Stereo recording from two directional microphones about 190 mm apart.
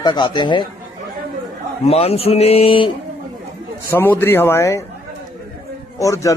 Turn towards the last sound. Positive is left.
turn(degrees=15)  # may be behind; listen again after turning